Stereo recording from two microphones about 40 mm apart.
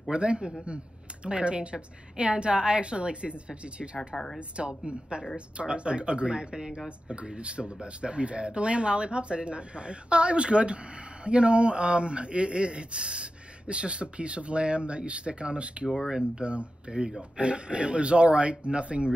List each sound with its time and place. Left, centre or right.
0.1 s speech: right
4.1 s speech: left
4.4 s speech: right